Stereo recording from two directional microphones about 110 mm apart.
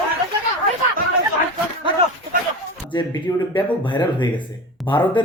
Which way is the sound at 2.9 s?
45° left (ahead or behind).